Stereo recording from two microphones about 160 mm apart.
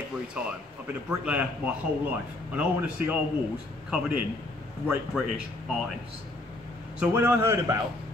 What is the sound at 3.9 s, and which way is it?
Speech, 5° right (ahead or behind).